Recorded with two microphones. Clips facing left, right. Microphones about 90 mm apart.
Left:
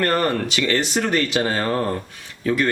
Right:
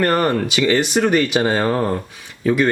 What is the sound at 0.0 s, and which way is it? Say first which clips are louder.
Speech: right 3 dB; 15° right (ahead or behind).